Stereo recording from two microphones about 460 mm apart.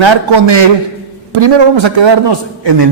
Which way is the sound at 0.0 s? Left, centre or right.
Right.